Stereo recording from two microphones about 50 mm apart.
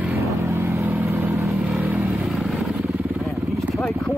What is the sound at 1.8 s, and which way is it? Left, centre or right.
Vehicle, right.